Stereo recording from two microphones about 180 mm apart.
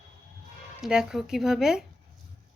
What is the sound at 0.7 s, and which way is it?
Speech, 5° right (ahead or behind).